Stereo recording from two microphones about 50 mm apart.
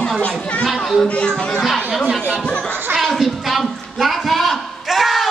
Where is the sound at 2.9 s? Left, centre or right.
Centre.